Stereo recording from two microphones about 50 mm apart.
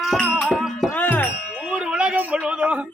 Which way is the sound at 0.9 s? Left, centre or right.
Left.